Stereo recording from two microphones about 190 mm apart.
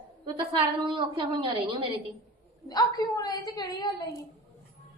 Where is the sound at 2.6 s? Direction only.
20° left (ahead or behind).